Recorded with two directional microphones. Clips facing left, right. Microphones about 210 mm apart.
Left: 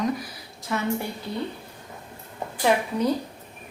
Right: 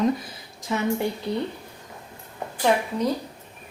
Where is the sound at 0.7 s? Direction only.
20° right (ahead or behind).